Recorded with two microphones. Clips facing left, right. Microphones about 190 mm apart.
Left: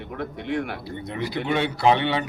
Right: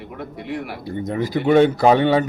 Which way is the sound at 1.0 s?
45° right (ahead or behind).